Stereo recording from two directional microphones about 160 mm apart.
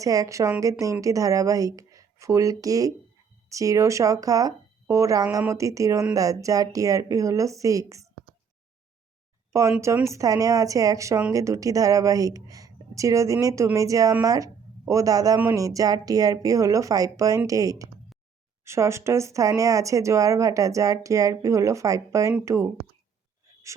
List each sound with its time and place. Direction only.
0.0 s a woman's voice: 20° right (ahead or behind)
9.5 s a woman's voice: 20° right (ahead or behind)